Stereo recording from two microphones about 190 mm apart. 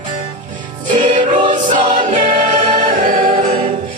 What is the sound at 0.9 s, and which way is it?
Music, 40° right (ahead or behind).